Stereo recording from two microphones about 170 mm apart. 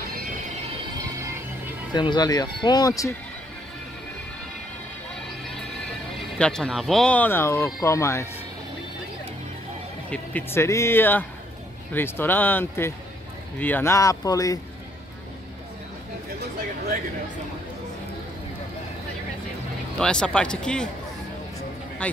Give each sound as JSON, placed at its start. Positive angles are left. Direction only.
{"t": 0.1, "sound": "mechanisms", "side_deg": -55}
{"t": 2.0, "sound": "speech", "side_deg": 25}
{"t": 6.3, "sound": "speech", "side_deg": 5}
{"t": 10.0, "sound": "speech", "side_deg": 10}
{"t": 20.0, "sound": "speech", "side_deg": 5}
{"t": 22.0, "sound": "a man's voice", "side_deg": 5}